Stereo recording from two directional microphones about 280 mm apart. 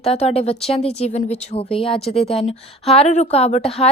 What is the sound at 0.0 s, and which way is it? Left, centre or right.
A woman's voice, left.